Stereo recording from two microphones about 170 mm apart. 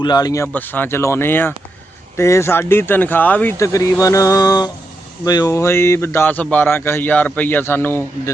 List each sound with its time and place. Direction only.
0.0 s speech: 25° left (ahead or behind)
0.4 s a man's voice: 10° left (ahead or behind)